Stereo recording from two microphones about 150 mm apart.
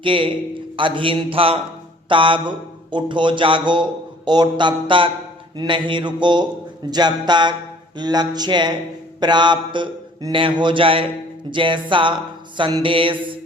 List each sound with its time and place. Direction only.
0.0 s speech: 35° right (ahead or behind)